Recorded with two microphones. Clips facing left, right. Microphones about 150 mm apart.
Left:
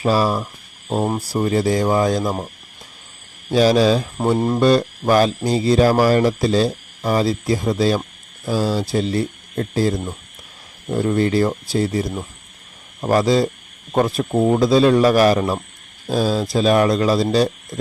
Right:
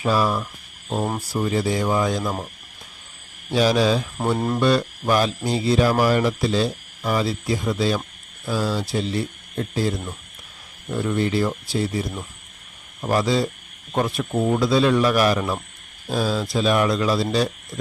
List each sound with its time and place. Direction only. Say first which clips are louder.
0.0 s speech: left 3 dB; 35° left (ahead or behind)
3.5 s speech: left 4 dB; 40° left (ahead or behind)
4.4 s speech: left 4 dB; 20° left (ahead or behind)
4.6 s speech: left 4 dB; 40° left (ahead or behind)